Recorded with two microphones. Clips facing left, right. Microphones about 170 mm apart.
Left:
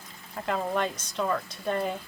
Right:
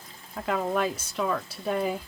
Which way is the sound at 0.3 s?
5° right (ahead or behind).